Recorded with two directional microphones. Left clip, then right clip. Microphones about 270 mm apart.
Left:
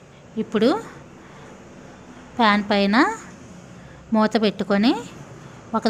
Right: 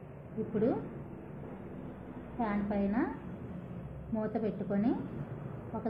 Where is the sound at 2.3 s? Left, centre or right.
Left.